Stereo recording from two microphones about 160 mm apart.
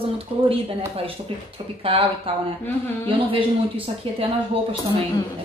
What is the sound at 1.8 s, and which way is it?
Speech, 35° right (ahead or behind).